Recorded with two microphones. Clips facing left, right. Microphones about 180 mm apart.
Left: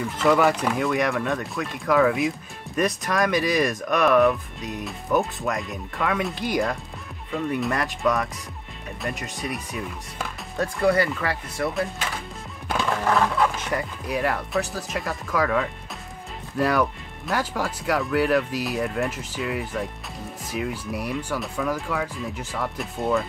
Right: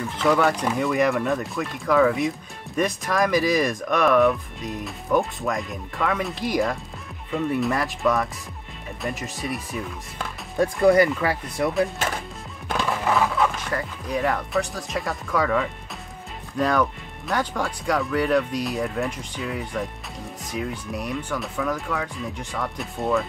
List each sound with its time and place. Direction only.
0.2 s speech: centre (ahead or behind)
10.6 s speech: 15° right (ahead or behind)
12.6 s music: 5° right (ahead or behind)
13.7 s speech: 10° left (ahead or behind)